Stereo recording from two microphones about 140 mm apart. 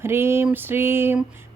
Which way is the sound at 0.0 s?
15° right (ahead or behind).